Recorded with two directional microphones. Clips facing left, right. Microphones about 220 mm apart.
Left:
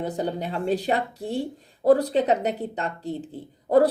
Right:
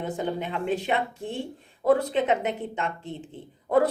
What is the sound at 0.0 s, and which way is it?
Speech, 35° left (ahead or behind).